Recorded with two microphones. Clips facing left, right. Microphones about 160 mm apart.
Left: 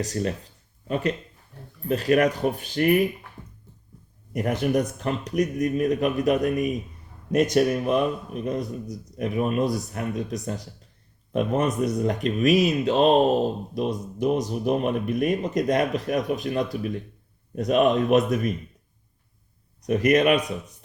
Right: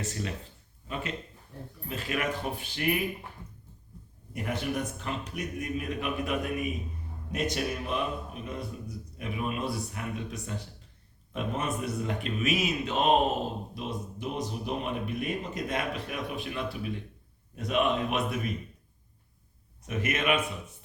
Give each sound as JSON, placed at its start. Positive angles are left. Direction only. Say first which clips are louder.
{"t": 0.0, "sound": "speech", "louder": "left 8 dB", "side_deg": 40}
{"t": 4.4, "sound": "speech", "louder": "left 8 dB", "side_deg": 45}
{"t": 19.8, "sound": "speech", "louder": "left 11 dB", "side_deg": 40}